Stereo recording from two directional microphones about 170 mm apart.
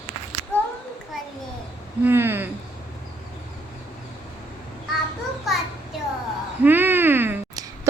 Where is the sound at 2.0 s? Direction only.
10° right (ahead or behind).